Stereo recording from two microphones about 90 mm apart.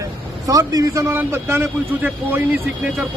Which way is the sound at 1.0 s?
30° right (ahead or behind).